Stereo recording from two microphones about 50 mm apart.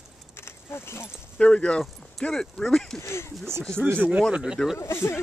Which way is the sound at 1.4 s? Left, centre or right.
Left.